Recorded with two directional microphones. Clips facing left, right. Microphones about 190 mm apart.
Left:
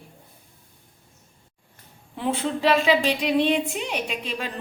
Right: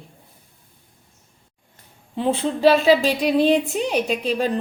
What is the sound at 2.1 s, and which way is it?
Speech, 25° right (ahead or behind).